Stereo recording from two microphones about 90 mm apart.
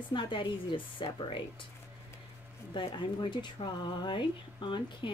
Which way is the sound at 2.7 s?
60° left (ahead or behind).